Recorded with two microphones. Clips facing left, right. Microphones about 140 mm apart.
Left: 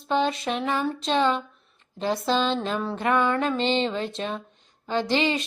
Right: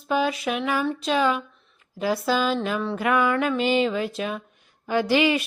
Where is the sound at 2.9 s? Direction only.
25° left (ahead or behind).